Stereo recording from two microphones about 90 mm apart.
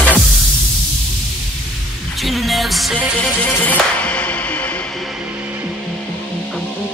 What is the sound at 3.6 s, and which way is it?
Music, 15° left (ahead or behind).